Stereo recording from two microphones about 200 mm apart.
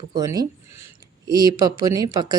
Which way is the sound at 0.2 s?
15° right (ahead or behind).